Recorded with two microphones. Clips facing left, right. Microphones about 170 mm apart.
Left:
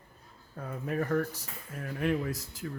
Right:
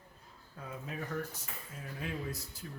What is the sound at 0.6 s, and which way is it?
Speech, 50° left (ahead or behind).